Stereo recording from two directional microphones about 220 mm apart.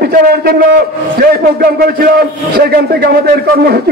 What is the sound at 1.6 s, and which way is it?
A man's voice, 45° right (ahead or behind).